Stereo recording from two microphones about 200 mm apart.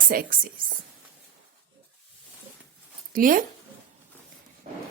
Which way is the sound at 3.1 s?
45° right (ahead or behind).